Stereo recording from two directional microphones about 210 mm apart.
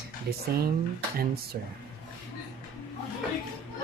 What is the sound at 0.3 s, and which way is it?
Speech, 50° right (ahead or behind).